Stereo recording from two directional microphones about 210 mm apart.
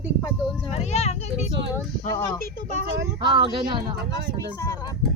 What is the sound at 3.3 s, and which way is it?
Speech, 25° right (ahead or behind).